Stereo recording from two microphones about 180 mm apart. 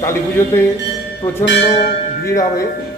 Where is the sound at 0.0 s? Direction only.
15° left (ahead or behind).